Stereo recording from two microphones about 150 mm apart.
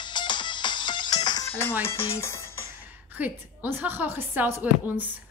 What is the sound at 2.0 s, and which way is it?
Music, 20° left (ahead or behind).